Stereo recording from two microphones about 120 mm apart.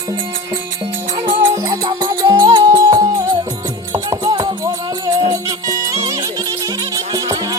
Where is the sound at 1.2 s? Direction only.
25° right (ahead or behind).